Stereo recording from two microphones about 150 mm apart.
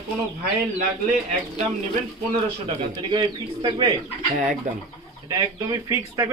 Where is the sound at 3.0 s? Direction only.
35° right (ahead or behind).